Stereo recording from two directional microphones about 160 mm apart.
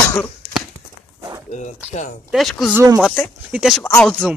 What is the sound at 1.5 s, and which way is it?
Speech, 50° left (ahead or behind).